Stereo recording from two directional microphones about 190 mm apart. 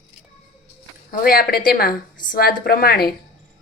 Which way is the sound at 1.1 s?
50° left (ahead or behind).